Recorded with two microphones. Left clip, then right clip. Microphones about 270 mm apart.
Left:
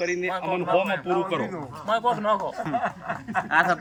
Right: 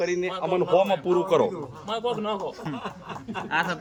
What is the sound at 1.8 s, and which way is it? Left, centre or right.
Speech, left.